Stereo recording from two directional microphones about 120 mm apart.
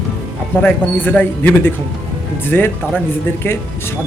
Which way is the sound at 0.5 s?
15° left (ahead or behind).